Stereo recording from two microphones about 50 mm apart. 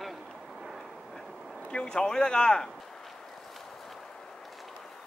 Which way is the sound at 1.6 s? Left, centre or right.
Centre.